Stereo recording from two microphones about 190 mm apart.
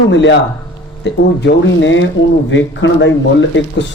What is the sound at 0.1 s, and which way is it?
Speech, 70° left (ahead or behind).